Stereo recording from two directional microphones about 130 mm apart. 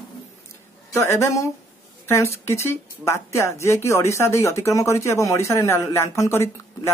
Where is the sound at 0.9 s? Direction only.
20° left (ahead or behind).